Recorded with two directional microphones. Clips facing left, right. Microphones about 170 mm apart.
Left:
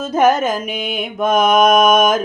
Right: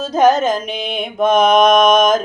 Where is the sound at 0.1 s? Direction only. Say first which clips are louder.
Right 1 dB; 10° left (ahead or behind).